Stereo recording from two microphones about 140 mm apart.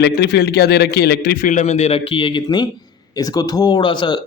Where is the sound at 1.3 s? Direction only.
65° left (ahead or behind); by 4.2 s 35° left (ahead or behind).